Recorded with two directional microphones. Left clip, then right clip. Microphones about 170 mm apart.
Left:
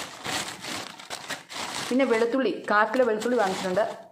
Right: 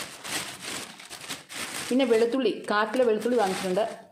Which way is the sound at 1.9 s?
10° right (ahead or behind).